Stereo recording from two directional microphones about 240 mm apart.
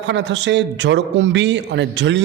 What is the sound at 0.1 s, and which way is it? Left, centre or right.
A man's voice, right.